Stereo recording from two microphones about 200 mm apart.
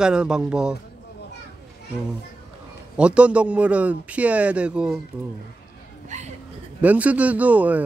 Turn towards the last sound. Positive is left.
turn(degrees=-10)  # may be behind; listen again after turning